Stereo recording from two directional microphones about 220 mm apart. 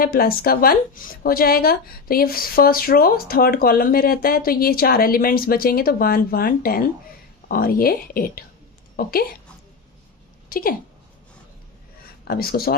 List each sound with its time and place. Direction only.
0.0 s a woman's voice: 40° left (ahead or behind)
10.5 s speech: 40° left (ahead or behind)
12.3 s speech: 45° left (ahead or behind)